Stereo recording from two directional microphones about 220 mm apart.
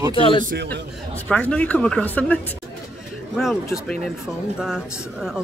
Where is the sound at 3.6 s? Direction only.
10° left (ahead or behind).